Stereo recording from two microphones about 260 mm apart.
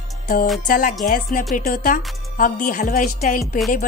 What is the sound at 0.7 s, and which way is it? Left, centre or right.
A woman's voice, left.